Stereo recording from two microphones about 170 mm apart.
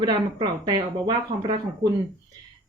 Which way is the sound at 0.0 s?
25° right (ahead or behind).